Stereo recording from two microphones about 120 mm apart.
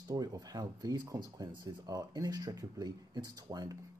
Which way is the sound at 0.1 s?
30° right (ahead or behind).